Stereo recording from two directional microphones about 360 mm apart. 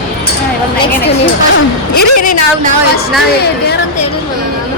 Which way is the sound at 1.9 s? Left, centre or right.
Left.